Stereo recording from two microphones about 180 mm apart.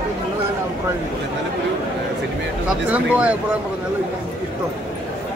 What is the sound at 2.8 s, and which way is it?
Speech, 10° right (ahead or behind).